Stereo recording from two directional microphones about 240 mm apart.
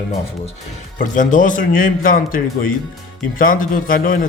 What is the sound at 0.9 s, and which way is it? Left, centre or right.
Speech, left.